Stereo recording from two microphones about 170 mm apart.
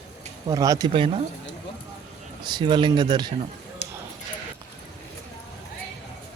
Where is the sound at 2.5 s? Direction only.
25° right (ahead or behind).